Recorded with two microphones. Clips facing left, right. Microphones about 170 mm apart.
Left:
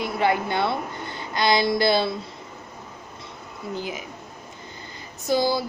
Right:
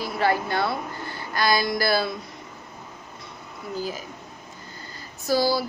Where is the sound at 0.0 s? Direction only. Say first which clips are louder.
Left 1 dB; 20° left (ahead or behind).